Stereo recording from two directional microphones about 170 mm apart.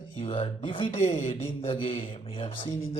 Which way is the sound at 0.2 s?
35° left (ahead or behind).